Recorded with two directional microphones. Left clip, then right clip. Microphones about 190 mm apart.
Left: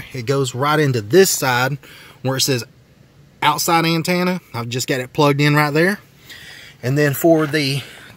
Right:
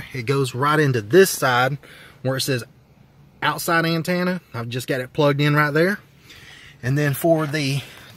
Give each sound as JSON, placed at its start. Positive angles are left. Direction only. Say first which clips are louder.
{"t": 0.0, "sound": "speech", "louder": "left 3 dB", "side_deg": 5}